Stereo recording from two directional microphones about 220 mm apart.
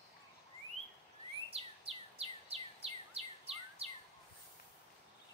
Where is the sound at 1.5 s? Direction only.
25° right (ahead or behind).